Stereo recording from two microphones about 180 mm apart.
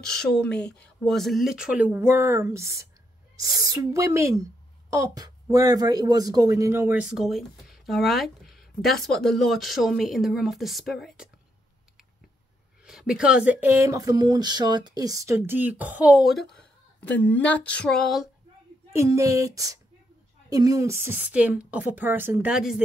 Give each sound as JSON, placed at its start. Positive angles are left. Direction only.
{"t": 0.0, "sound": "a woman's voice", "side_deg": 5}
{"t": 12.8, "sound": "speech", "side_deg": -5}
{"t": 18.9, "sound": "speech", "side_deg": -15}